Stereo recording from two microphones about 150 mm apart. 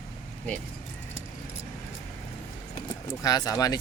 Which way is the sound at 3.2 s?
25° left (ahead or behind).